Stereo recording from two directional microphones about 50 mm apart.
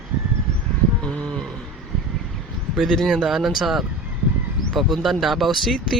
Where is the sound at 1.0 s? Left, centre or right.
Centre.